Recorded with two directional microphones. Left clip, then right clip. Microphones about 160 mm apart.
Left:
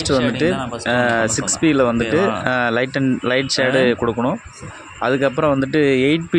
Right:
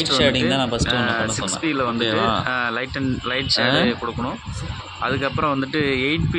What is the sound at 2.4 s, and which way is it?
Speech, 40° left (ahead or behind).